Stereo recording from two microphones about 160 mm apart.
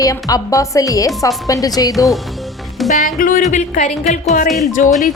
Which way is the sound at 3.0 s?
60° left (ahead or behind).